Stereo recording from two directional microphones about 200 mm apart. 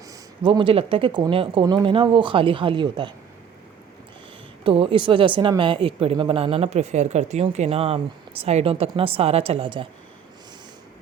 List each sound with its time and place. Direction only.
0.1 s speech: 20° right (ahead or behind)
4.6 s speech: 25° right (ahead or behind)